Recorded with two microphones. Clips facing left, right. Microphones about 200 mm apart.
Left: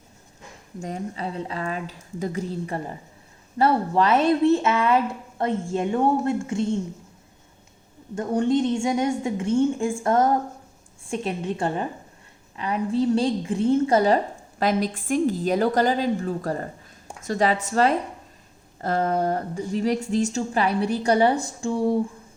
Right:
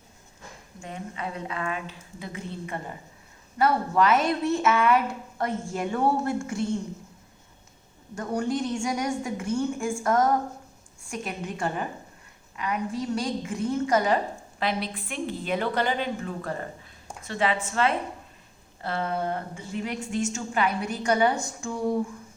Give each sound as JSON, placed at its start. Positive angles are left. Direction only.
{"t": 0.8, "sound": "a woman's voice", "side_deg": 40}
{"t": 8.1, "sound": "a woman's voice", "side_deg": 25}
{"t": 14.6, "sound": "a woman's voice", "side_deg": 45}